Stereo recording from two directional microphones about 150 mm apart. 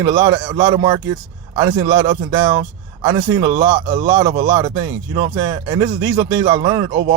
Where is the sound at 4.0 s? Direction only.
30° right (ahead or behind).